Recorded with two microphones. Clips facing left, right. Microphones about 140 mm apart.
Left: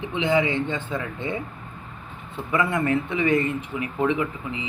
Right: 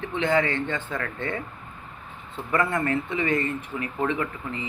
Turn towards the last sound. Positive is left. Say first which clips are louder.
# left 2 dB
turn(degrees=15)  # may be behind; listen again after turning